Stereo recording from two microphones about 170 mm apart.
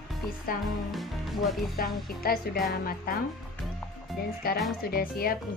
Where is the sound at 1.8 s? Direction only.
60° left (ahead or behind).